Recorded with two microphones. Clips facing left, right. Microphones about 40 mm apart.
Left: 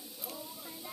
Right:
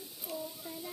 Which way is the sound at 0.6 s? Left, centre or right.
Centre.